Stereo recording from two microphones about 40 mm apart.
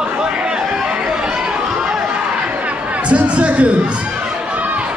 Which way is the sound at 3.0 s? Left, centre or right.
Right.